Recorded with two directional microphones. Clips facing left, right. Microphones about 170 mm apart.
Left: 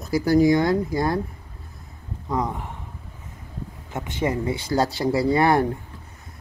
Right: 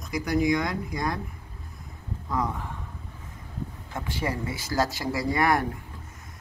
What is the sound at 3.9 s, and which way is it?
Speech, 20° left (ahead or behind).